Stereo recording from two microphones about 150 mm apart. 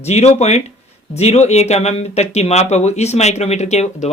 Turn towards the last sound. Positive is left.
turn(degrees=50)  # may be behind; listen again after turning